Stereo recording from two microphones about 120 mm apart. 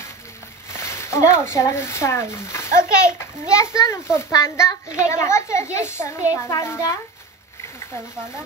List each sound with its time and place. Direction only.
0.7 s a child's voice: 20° left (ahead or behind)